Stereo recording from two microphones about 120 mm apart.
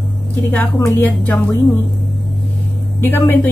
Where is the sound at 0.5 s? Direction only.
20° left (ahead or behind).